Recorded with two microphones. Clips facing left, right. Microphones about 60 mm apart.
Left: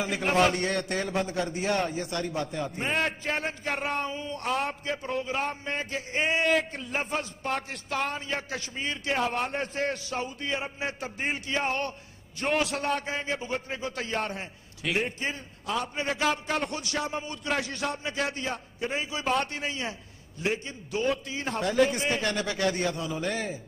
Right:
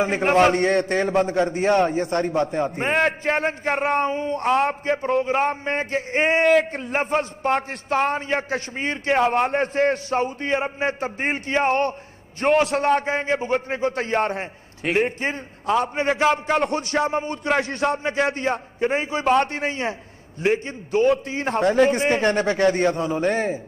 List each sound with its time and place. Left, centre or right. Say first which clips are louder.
0.0 s a man's voice: right 7 dB; right
2.9 s a man's voice: right 8 dB; right
12.6 s a man's voice: right 9 dB; right
16.9 s a man's voice: right 9 dB; right